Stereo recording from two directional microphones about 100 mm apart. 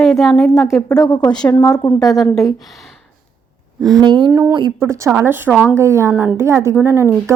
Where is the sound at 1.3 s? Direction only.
10° left (ahead or behind).